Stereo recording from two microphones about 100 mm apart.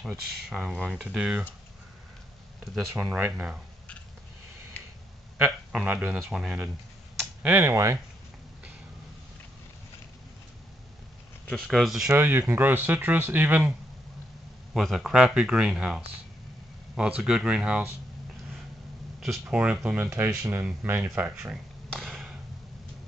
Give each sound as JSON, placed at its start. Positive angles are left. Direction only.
{"t": 0.5, "sound": "speech", "side_deg": -5}
{"t": 3.2, "sound": "speech", "side_deg": -15}
{"t": 5.4, "sound": "a man's voice", "side_deg": -10}
{"t": 7.4, "sound": "speech", "side_deg": -20}
{"t": 7.7, "sound": "speech", "side_deg": -30}
{"t": 11.5, "sound": "speech", "side_deg": 0}
{"t": 12.2, "sound": "speech", "side_deg": -20}
{"t": 14.7, "sound": "speech", "side_deg": 0}
{"t": 19.1, "sound": "a sound", "side_deg": -5}
{"t": 19.5, "sound": "speech", "side_deg": -15}
{"t": 20.2, "sound": "speech", "side_deg": -30}
{"t": 20.6, "sound": "speech", "side_deg": -20}
{"t": 21.9, "sound": "a sound", "side_deg": 5}